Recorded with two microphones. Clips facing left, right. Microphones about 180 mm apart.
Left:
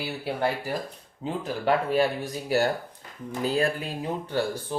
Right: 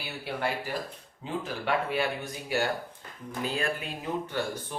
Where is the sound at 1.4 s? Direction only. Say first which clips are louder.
Left 6 dB; 40° left (ahead or behind).